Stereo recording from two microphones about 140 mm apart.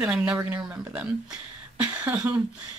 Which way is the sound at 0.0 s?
5° right (ahead or behind).